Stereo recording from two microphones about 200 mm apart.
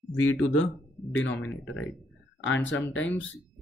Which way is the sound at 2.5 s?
70° left (ahead or behind).